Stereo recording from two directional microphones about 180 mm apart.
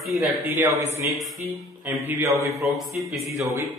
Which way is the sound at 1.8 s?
10° right (ahead or behind).